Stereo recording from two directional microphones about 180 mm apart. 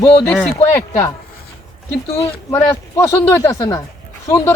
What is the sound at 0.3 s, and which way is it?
Speech, 5° left (ahead or behind).